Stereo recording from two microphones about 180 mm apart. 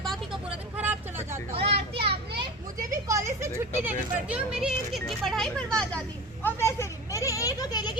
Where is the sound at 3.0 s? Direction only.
15° right (ahead or behind).